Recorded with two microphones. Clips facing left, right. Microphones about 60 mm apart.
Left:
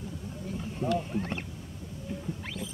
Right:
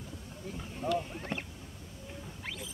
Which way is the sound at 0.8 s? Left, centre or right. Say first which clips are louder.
Left 3 dB; centre.